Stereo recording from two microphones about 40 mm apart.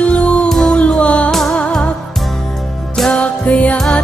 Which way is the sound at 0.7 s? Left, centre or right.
Left.